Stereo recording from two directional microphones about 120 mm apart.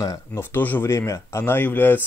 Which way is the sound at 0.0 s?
25° left (ahead or behind).